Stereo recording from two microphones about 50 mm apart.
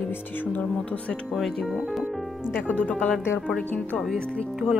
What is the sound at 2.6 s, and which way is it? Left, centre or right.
Speech, left.